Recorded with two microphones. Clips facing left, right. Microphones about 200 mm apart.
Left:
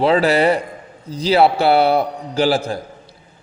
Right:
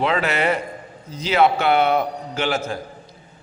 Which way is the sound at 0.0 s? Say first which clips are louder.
Left 6 dB; 35° left (ahead or behind).